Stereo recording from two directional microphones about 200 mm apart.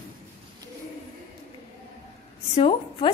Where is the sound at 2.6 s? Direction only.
30° left (ahead or behind).